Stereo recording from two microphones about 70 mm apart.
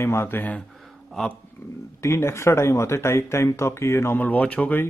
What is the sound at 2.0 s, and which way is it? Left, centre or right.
Speech, left.